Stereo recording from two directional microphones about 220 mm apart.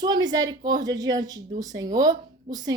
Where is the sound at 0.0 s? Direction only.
20° right (ahead or behind).